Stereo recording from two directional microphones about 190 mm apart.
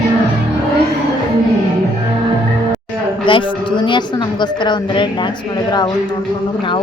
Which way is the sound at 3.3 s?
25° left (ahead or behind).